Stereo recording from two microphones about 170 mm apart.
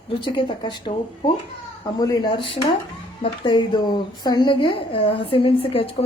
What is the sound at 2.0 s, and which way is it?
A woman's voice, 25° left (ahead or behind).